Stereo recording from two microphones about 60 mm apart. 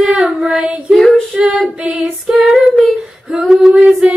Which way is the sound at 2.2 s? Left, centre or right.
Centre.